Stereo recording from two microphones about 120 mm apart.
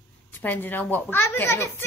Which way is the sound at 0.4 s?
15° left (ahead or behind).